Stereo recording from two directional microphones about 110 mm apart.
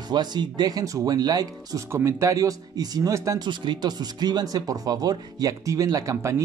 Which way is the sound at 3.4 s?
40° right (ahead or behind).